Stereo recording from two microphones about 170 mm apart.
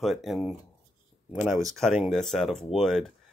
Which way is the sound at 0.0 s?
Centre (ahead or behind).